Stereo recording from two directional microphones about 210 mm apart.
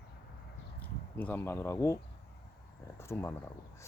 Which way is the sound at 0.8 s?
10° left (ahead or behind).